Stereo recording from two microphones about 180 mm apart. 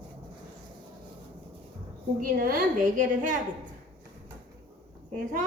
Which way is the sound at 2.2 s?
50° right (ahead or behind).